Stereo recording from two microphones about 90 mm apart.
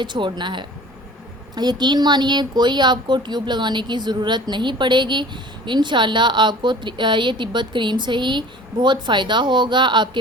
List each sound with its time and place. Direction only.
0.0 s speech: 60° right (ahead or behind)